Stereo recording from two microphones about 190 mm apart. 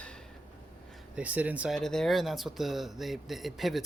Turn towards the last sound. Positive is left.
turn(degrees=0)  # may be behind; listen again after turning